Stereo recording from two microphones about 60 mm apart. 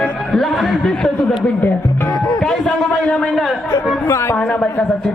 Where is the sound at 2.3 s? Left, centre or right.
Centre.